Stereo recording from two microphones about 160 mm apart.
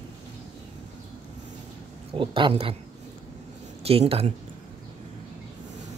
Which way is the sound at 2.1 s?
30° right (ahead or behind).